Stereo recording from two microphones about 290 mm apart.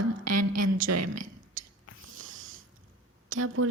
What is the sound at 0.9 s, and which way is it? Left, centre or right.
Speech, right.